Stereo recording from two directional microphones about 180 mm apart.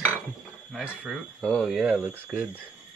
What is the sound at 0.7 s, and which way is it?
Speech, centre (ahead or behind).